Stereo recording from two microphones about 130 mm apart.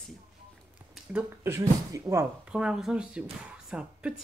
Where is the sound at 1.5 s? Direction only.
25° right (ahead or behind).